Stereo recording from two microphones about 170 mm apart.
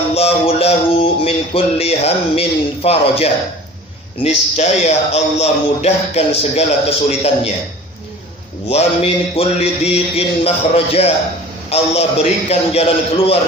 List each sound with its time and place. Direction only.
0.1 s a sound: 35° left (ahead or behind)
4.2 s a man's voice: 40° left (ahead or behind)
8.7 s a man's voice: 35° left (ahead or behind)